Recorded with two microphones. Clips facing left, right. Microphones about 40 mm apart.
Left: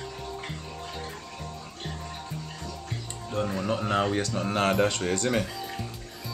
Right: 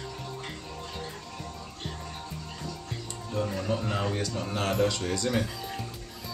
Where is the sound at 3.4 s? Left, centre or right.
Left.